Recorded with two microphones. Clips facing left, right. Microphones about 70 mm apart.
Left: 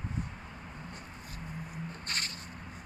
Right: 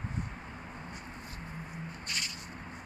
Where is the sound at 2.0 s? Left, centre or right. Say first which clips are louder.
Left 1 dB; left.